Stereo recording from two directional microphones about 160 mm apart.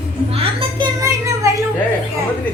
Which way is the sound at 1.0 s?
20° right (ahead or behind).